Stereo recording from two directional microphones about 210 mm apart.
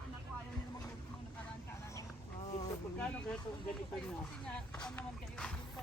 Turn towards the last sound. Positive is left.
turn(degrees=5)  # may be behind; listen again after turning